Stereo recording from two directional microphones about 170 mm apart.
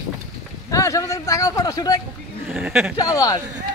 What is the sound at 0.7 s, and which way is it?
Speech, 20° left (ahead or behind).